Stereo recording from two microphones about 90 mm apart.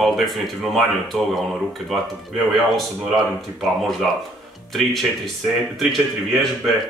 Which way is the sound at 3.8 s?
Centre (ahead or behind).